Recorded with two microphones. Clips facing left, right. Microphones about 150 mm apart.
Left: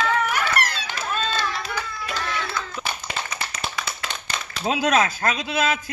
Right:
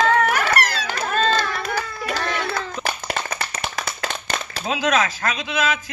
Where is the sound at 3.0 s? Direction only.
45° right (ahead or behind).